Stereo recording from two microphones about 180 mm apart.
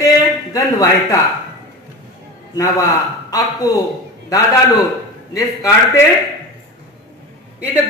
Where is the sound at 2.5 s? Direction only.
20° left (ahead or behind).